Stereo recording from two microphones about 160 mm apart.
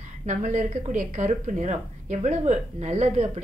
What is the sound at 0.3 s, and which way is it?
Speech, 50° right (ahead or behind).